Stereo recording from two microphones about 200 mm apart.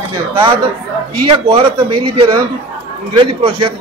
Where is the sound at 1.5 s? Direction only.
25° right (ahead or behind).